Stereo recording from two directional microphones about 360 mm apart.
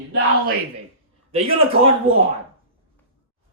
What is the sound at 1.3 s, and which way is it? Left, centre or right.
Speech, centre.